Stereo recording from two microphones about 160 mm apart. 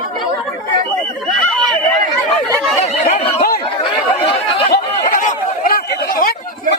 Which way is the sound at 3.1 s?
45° left (ahead or behind).